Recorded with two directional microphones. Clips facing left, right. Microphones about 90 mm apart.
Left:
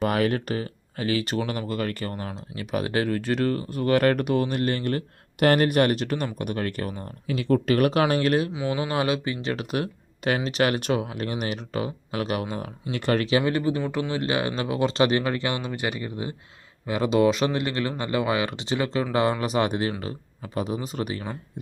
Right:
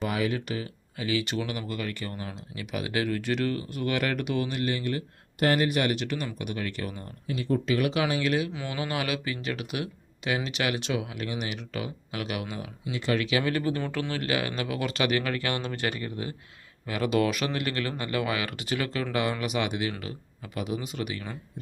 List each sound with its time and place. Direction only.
0.0 s speech: 55° left (ahead or behind)
7.3 s speech: 90° left
7.7 s speech: 50° left (ahead or behind)
8.5 s speech: 25° left (ahead or behind); by 12.7 s 40° left (ahead or behind)
12.9 s speech: 55° left (ahead or behind)
13.1 s speech: 35° left (ahead or behind)
13.4 s speech: 25° left (ahead or behind)